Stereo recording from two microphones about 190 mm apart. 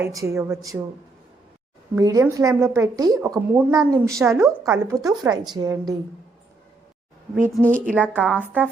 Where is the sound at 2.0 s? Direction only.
15° right (ahead or behind).